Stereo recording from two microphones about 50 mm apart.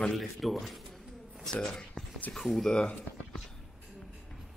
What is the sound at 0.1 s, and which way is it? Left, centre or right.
Speech, centre.